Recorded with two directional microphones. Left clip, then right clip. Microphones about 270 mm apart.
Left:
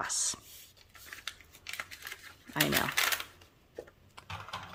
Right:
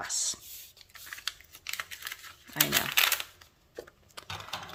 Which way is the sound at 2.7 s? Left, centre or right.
Centre.